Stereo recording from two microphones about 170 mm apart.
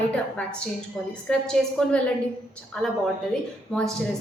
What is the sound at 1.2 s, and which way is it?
A woman's voice, 5° left (ahead or behind).